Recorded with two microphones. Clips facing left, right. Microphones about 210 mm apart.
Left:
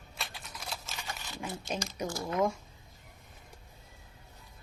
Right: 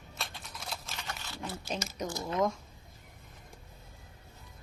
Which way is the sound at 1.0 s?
15° left (ahead or behind).